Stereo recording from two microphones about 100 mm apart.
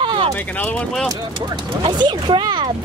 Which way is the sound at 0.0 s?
55° right (ahead or behind).